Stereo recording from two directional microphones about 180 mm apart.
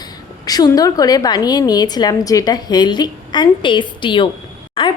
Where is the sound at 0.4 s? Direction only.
20° left (ahead or behind).